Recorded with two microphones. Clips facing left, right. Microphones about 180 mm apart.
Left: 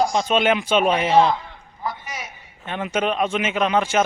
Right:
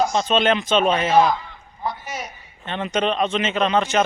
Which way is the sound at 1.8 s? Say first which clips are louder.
Right 2 dB; 25° right (ahead or behind).